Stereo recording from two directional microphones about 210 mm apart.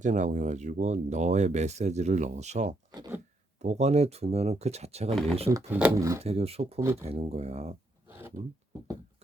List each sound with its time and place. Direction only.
0.0 s speech: 35° right (ahead or behind)
2.9 s a sound: 20° right (ahead or behind)
3.6 s speech: 30° right (ahead or behind)
5.5 s speech: 15° right (ahead or behind)
6.2 s speech: 30° right (ahead or behind)
6.7 s speech: 10° right (ahead or behind)
7.0 s speech: 30° right (ahead or behind)
8.0 s a sound: 10° right (ahead or behind)